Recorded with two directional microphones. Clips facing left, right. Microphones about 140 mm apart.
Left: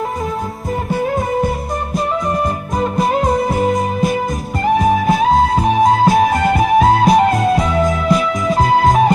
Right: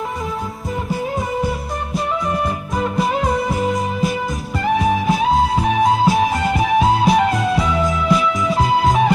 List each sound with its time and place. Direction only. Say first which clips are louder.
1.0 s music: left 5 dB; 50° left (ahead or behind)
2.8 s music: left 3 dB; 45° left (ahead or behind)